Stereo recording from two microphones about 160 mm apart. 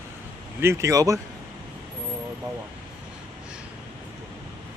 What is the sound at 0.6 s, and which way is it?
Speech, 15° right (ahead or behind).